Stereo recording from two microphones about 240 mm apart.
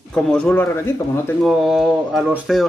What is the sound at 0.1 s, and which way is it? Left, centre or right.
Speech, centre.